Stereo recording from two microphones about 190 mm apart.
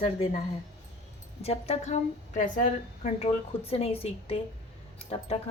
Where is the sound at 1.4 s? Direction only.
35° left (ahead or behind).